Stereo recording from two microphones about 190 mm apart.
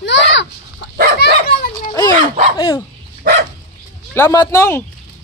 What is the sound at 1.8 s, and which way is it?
Dog, 20° left (ahead or behind).